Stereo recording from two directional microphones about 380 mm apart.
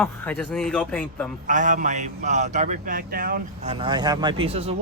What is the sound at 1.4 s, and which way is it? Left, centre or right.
A man's voice, centre.